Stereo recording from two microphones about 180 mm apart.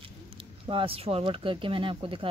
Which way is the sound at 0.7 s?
30° right (ahead or behind).